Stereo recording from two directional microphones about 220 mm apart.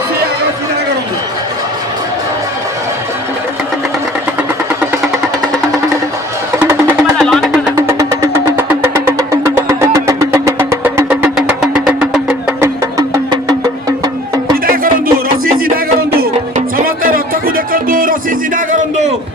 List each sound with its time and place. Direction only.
7.2 s music: centre (ahead or behind)
7.8 s vehicle: 15° right (ahead or behind)
14.7 s a sound: 40° right (ahead or behind)
15.7 s music: 40° right (ahead or behind)